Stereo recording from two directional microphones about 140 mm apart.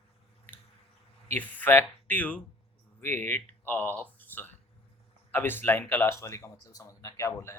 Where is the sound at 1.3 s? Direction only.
15° left (ahead or behind).